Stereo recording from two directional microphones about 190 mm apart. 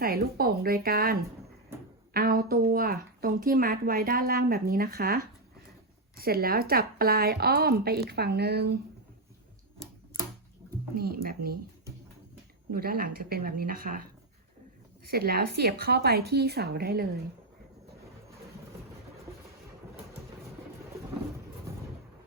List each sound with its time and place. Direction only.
0.0 s a woman's voice: 50° right (ahead or behind)
10.9 s speech: 50° right (ahead or behind)
12.7 s speech: 50° right (ahead or behind)
15.1 s a woman's voice: 55° right (ahead or behind)